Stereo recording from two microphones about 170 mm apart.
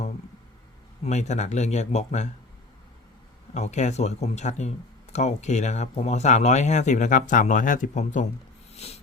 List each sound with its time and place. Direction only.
1.0 s speech: 40° left (ahead or behind)
3.5 s speech: 40° left (ahead or behind)
8.7 s a sound: 40° left (ahead or behind)